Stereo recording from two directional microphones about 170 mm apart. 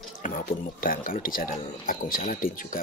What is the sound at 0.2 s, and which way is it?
Speech, 55° left (ahead or behind).